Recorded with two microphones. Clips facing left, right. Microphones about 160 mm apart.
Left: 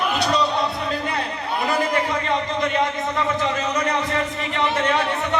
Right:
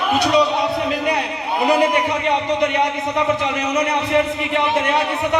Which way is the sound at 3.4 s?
15° right (ahead or behind).